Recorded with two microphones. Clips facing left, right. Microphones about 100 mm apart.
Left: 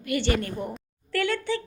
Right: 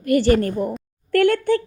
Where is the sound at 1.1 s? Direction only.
55° right (ahead or behind).